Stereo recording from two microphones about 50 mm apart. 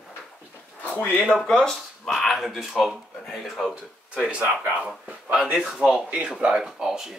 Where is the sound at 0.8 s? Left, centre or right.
Left.